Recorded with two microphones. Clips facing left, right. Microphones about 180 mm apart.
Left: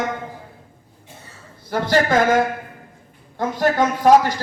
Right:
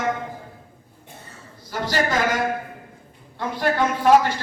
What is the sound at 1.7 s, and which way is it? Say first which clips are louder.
Speech: left 5 dB; 55° left (ahead or behind).